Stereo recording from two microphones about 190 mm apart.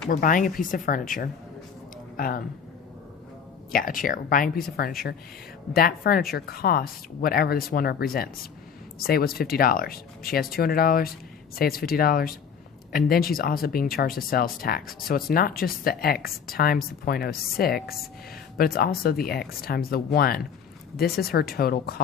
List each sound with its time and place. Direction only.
0.1 s speech: 45° left (ahead or behind)
3.7 s speech: 50° left (ahead or behind)